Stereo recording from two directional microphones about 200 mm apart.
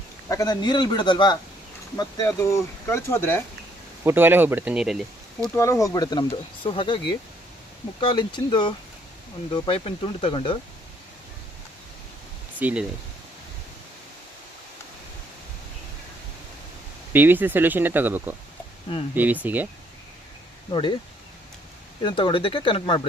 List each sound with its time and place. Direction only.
0.3 s speech: 20° left (ahead or behind)
4.0 s speech: 10° right (ahead or behind)
5.5 s speech: 15° left (ahead or behind)
8.0 s speech: 20° left (ahead or behind)
12.5 s speech: 10° right (ahead or behind)
17.1 s speech: 10° right (ahead or behind)
20.7 s speech: 25° left (ahead or behind)
22.0 s speech: 25° left (ahead or behind)